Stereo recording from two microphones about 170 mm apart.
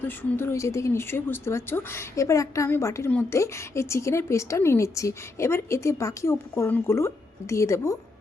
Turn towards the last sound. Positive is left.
turn(degrees=15)  # may be behind; listen again after turning